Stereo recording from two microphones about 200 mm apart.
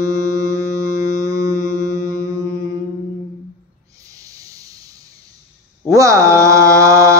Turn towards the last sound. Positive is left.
turn(degrees=-15)  # may be behind; listen again after turning